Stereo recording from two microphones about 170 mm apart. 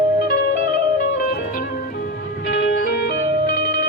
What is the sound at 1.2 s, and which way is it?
Music, 60° left (ahead or behind).